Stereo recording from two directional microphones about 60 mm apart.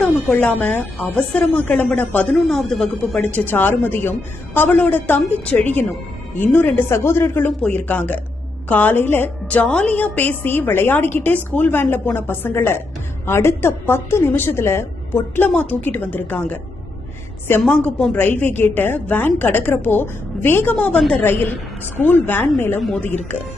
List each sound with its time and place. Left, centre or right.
0.0 s speech: centre
0.4 s speech: left
2.3 s speech: centre
3.3 s a woman's voice: left
6.9 s a woman's voice: left
7.7 s a woman's voice: left
15.5 s a woman's voice: left
18.1 s a woman's voice: left
20.7 s speech: left
21.1 s a woman's voice: left